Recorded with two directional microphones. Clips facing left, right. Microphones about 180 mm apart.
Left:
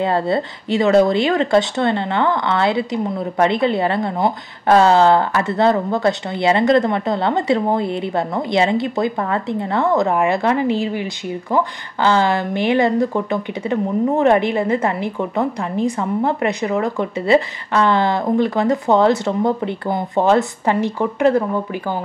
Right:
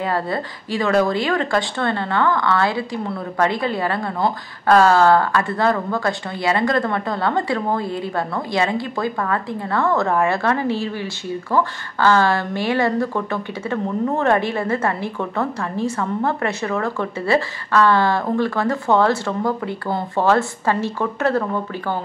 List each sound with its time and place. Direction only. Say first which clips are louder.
0.0 s speech: left 5 dB; 25° left (ahead or behind)